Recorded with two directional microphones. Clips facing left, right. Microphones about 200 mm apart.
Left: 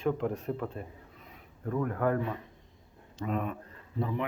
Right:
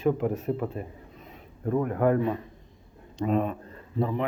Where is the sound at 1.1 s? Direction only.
25° right (ahead or behind).